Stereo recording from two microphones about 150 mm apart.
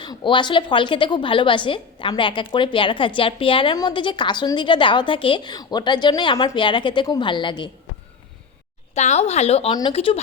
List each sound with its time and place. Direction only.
0.0 s a woman's voice: 30° left (ahead or behind)
9.0 s a woman's voice: 50° left (ahead or behind)